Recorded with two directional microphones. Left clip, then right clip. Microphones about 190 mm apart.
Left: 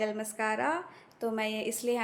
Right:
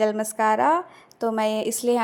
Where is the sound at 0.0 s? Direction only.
40° right (ahead or behind).